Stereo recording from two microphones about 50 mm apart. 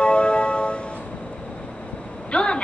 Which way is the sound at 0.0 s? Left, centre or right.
Left.